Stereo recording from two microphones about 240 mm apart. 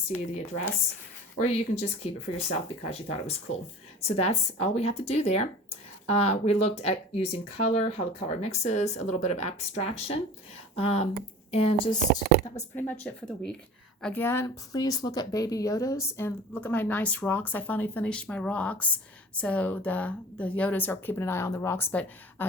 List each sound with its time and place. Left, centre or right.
1.4 s speech: left
12.7 s a woman's voice: centre